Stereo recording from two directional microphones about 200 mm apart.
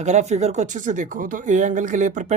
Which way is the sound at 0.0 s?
35° right (ahead or behind).